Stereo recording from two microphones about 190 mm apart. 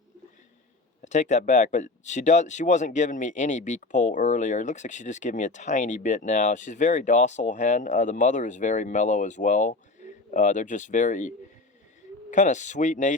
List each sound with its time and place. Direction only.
1.0 s speech: 40° left (ahead or behind)